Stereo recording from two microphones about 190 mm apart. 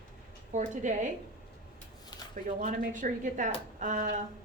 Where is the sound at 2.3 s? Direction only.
45° right (ahead or behind).